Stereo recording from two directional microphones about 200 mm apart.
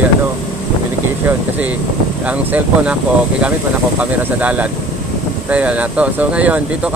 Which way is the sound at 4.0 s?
5° right (ahead or behind).